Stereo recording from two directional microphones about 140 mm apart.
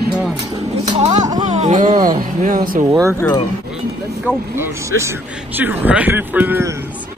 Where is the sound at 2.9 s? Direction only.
20° right (ahead or behind).